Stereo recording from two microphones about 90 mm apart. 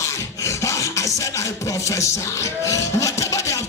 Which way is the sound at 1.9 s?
35° left (ahead or behind).